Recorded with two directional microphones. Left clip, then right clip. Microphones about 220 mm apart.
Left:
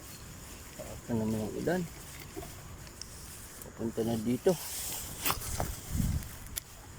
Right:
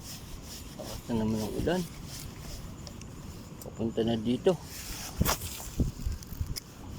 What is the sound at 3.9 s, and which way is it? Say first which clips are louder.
Speech: right 3 dB; 10° right (ahead or behind).